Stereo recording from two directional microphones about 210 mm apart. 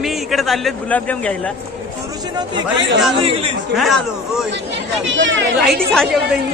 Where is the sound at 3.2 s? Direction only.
25° right (ahead or behind).